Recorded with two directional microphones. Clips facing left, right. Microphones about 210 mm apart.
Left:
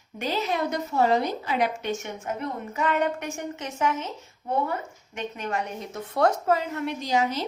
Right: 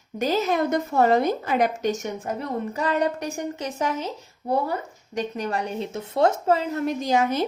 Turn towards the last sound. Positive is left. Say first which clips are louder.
# right 3 dB
turn(degrees=-50)  # may be behind; listen again after turning